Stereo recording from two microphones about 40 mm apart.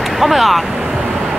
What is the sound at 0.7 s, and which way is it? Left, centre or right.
Vehicle, centre.